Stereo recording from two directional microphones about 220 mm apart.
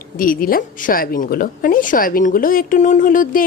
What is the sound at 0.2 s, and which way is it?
A woman's voice, 40° left (ahead or behind).